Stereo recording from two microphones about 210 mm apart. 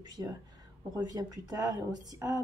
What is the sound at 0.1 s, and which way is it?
A woman's voice, 20° right (ahead or behind).